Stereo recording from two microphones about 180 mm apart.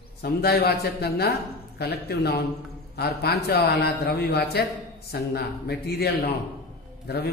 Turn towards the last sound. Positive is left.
turn(degrees=65)  # may be behind; listen again after turning